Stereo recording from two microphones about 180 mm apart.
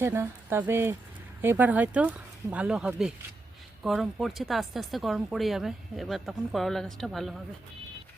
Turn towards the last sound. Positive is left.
turn(degrees=0)  # may be behind; listen again after turning